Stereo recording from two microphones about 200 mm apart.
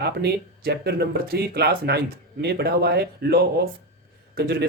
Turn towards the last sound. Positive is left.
turn(degrees=-55)  # may be behind; listen again after turning